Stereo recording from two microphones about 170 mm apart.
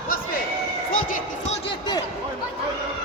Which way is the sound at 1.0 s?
50° left (ahead or behind).